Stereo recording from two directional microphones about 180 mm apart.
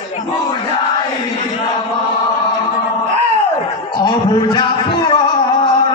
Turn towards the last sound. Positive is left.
turn(degrees=25)  # may be behind; listen again after turning